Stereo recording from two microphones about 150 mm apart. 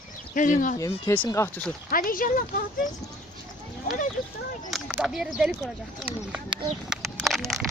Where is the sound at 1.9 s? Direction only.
65° left (ahead or behind).